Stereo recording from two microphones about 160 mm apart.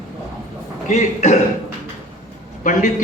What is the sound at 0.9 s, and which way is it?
Speech, 45° left (ahead or behind).